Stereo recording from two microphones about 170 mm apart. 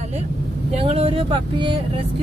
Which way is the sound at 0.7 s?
40° right (ahead or behind).